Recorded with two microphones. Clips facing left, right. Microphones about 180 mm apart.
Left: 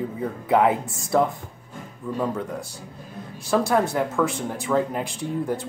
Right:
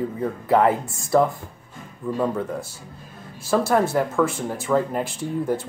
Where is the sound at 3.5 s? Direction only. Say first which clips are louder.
Right 1 dB; centre (ahead or behind).